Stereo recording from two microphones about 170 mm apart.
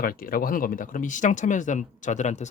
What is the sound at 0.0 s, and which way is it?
Speech, 60° left (ahead or behind).